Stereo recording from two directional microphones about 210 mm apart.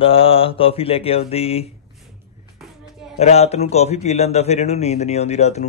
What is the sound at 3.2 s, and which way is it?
A man's voice, 30° left (ahead or behind).